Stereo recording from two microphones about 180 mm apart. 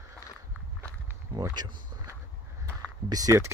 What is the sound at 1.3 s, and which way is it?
Speech, 20° right (ahead or behind).